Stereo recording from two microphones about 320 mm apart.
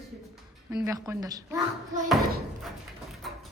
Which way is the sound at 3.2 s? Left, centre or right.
Centre.